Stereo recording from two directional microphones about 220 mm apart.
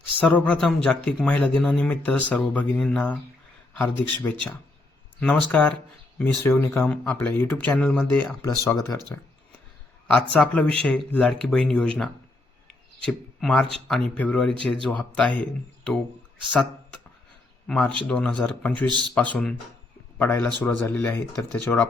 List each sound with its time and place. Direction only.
0.2 s speech: 5° left (ahead or behind)
10.3 s speech: 5° left (ahead or behind)
18.9 s speech: 20° right (ahead or behind)
19.1 s speech: 5° left (ahead or behind)